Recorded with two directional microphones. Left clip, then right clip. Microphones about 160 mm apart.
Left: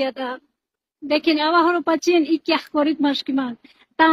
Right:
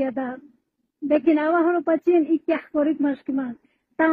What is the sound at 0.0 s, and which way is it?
A woman's voice, 30° left (ahead or behind).